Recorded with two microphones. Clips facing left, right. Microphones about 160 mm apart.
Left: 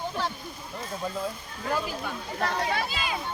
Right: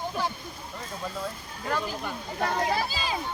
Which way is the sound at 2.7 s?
35° right (ahead or behind).